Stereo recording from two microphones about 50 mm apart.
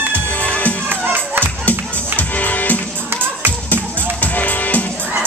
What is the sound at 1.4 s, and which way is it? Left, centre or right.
Music, left.